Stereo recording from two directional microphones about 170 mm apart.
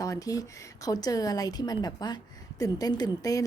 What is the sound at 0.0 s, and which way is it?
A woman's voice, 20° left (ahead or behind).